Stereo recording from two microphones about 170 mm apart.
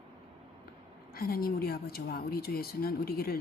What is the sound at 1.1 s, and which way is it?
Speech, 60° left (ahead or behind).